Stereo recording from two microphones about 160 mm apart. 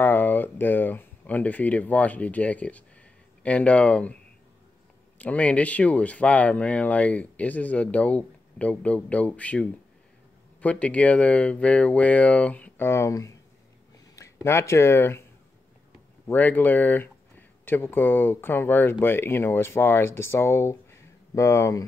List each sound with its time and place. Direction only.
0.0 s speech: 10° left (ahead or behind)
5.2 s speech: 10° left (ahead or behind)
16.3 s speech: 10° left (ahead or behind)